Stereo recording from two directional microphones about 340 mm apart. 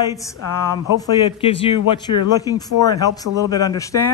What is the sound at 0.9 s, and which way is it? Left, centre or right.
Speech, centre.